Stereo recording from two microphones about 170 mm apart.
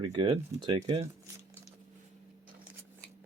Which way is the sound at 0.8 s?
40° right (ahead or behind).